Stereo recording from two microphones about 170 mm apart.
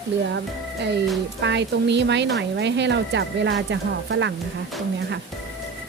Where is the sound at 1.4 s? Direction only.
90° right.